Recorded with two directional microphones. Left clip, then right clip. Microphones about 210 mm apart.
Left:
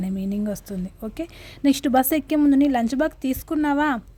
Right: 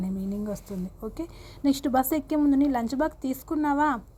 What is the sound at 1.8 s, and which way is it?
A woman's voice, 30° left (ahead or behind).